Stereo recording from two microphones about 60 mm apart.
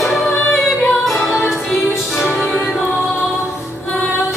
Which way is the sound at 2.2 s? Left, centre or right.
Left.